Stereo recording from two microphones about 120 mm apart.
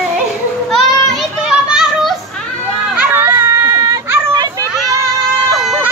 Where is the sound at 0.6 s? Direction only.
Centre (ahead or behind).